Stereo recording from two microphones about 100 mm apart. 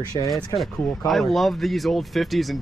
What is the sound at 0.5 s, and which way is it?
Speech, centre (ahead or behind).